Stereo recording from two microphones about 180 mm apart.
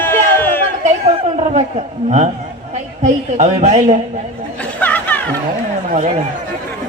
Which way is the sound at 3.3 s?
40° right (ahead or behind).